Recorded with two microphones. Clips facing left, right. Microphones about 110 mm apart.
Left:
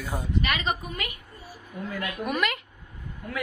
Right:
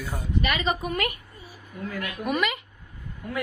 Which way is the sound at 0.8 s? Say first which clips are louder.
Right 7 dB; 60° right (ahead or behind).